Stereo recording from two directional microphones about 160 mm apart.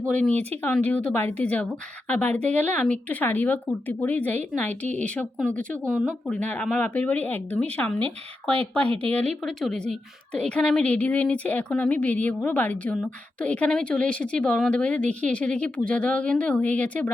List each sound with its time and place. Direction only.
0.6 s a woman's voice: 10° left (ahead or behind)
8.9 s a woman's voice: 40° right (ahead or behind)
9.1 s a woman's voice: 5° left (ahead or behind)